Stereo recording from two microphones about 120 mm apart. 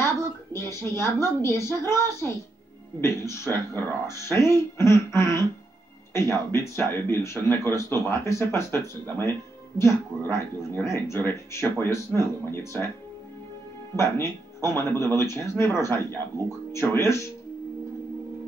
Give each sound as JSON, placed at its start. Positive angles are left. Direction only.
{"t": 0.0, "sound": "a woman's voice", "side_deg": 20}
{"t": 13.9, "sound": "speech", "side_deg": 20}